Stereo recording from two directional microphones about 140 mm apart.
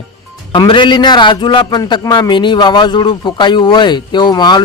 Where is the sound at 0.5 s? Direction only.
35° left (ahead or behind).